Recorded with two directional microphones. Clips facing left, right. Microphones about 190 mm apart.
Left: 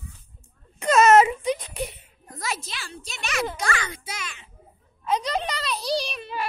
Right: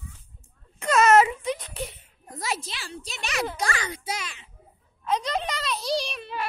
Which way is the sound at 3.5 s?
35° right (ahead or behind).